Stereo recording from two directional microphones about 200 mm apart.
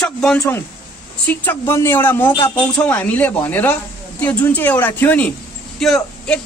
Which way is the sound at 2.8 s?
5° left (ahead or behind).